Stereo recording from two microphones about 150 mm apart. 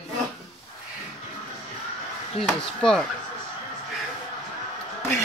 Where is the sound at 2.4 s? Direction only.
5° left (ahead or behind).